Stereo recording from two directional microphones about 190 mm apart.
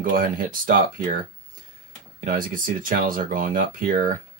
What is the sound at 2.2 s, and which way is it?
Speech, 45° right (ahead or behind).